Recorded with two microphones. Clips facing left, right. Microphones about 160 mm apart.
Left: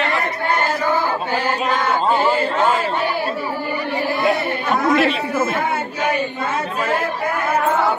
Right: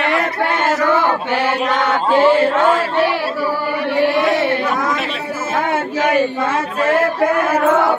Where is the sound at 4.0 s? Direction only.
90° right.